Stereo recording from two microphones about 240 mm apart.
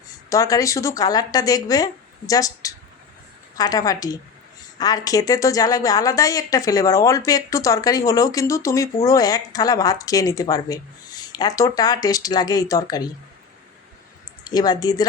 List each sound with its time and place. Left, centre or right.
0.3 s a woman's voice: centre
14.5 s a woman's voice: centre